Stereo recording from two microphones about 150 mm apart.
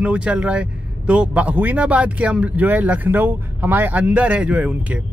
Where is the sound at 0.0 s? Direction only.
10° right (ahead or behind).